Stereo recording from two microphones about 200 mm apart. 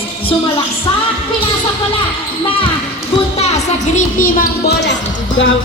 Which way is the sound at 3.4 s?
35° left (ahead or behind).